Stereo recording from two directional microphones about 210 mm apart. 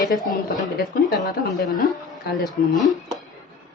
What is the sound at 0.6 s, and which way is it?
Speech, 40° left (ahead or behind).